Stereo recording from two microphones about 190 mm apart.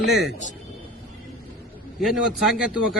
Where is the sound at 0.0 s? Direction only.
Centre (ahead or behind).